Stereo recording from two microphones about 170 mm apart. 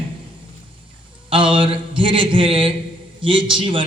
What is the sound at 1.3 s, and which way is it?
A man's voice, 30° right (ahead or behind).